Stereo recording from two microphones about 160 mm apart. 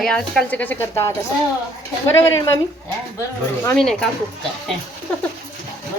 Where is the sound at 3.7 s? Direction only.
5° left (ahead or behind).